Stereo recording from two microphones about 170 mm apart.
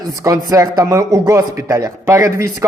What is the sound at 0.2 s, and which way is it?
Speech, 20° right (ahead or behind).